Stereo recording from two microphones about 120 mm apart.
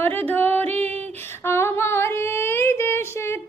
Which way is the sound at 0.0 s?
15° left (ahead or behind).